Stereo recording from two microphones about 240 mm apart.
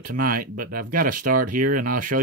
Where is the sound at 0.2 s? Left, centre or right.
Right.